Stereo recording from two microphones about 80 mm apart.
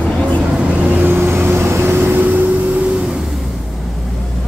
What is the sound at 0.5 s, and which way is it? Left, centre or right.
Vehicle, right.